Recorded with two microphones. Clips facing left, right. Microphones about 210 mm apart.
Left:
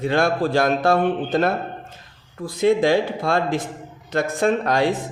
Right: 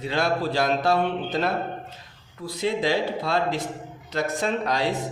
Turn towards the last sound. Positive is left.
turn(degrees=50)  # may be behind; listen again after turning